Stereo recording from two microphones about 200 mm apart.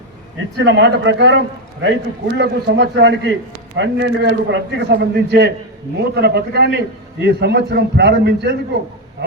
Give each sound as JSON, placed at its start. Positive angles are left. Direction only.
{"t": 0.5, "sound": "a man's voice", "side_deg": -60}